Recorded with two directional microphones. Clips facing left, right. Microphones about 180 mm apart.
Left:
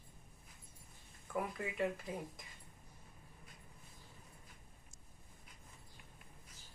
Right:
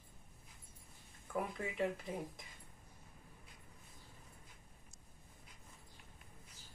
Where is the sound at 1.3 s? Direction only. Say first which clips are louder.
Even; centre (ahead or behind).